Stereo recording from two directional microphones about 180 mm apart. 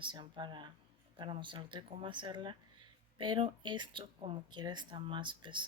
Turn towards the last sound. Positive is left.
turn(degrees=-25)  # may be behind; listen again after turning